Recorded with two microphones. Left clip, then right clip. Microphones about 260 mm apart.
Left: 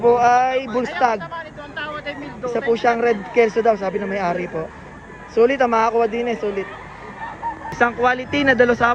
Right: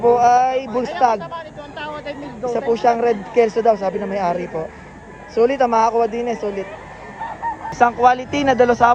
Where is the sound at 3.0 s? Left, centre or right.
Centre.